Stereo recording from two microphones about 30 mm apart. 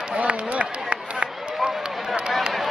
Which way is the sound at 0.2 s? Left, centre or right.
Right.